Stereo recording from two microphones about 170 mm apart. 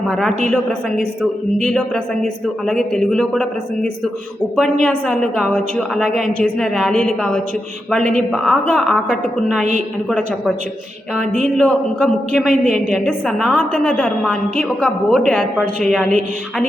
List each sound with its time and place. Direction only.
0.5 s a woman's voice: centre (ahead or behind)
4.5 s a woman's voice: centre (ahead or behind)
8.3 s a woman's voice: centre (ahead or behind)
11.6 s a woman's voice: 5° left (ahead or behind)